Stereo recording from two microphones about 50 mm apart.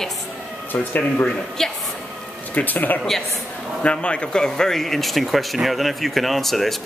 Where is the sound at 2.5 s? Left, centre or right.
Left.